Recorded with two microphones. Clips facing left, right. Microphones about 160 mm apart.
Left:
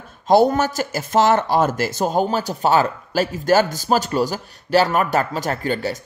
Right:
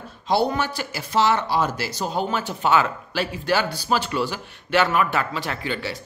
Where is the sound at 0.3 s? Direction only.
45° left (ahead or behind).